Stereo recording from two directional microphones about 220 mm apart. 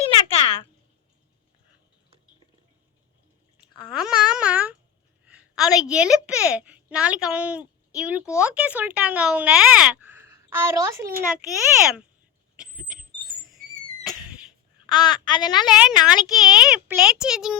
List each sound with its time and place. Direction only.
0.3 s a sound: 25° left (ahead or behind)
3.9 s babbling: 5° right (ahead or behind)
5.2 s a woman's voice: 5° right (ahead or behind)
12.5 s a sound: 5° right (ahead or behind)
14.8 s a woman's voice: 20° left (ahead or behind)
15.7 s a woman's voice: 5° right (ahead or behind)